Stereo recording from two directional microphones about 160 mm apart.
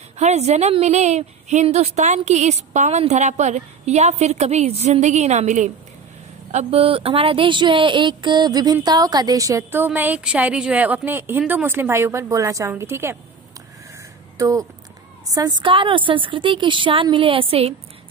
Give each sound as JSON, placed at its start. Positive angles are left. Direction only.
{"t": 0.2, "sound": "a woman's voice", "side_deg": -45}
{"t": 14.4, "sound": "a woman's voice", "side_deg": -20}